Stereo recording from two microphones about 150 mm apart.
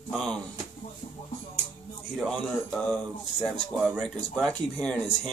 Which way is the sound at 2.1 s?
Centre (ahead or behind).